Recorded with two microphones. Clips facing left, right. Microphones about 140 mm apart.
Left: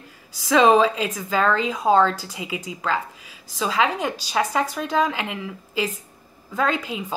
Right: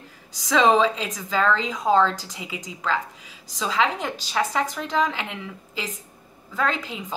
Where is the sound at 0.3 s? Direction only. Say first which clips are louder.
Left 3 dB; 10° left (ahead or behind).